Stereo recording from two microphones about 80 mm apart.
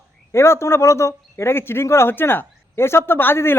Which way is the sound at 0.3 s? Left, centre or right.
Left.